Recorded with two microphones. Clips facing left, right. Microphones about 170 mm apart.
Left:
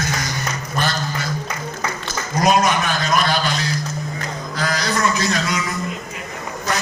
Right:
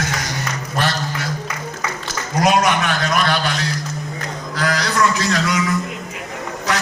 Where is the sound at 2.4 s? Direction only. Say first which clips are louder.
Right 1 dB; 70° right (ahead or behind).